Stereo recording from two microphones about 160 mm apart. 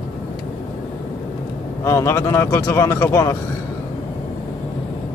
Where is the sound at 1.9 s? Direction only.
15° left (ahead or behind).